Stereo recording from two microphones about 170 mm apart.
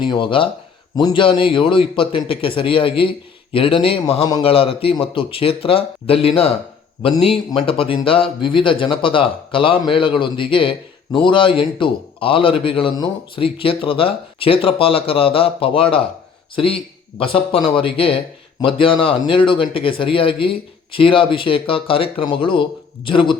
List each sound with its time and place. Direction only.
0.0 s speech: 30° left (ahead or behind)